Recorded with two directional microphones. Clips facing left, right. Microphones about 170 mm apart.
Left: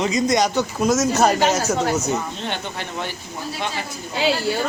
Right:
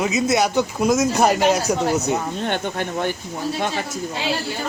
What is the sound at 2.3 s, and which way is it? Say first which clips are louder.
Speech: right 5 dB; 50° right (ahead or behind).